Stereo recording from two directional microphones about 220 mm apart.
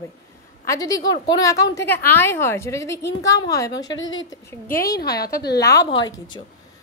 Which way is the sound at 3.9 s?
60° left (ahead or behind).